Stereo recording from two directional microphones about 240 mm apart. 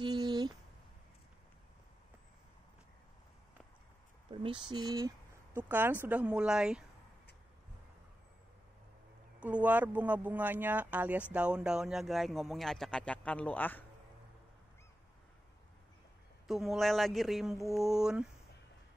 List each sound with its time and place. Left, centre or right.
0.0 s a sound: centre
4.3 s speech: right; by 6.8 s centre
9.4 s speech: centre
16.4 s speech: centre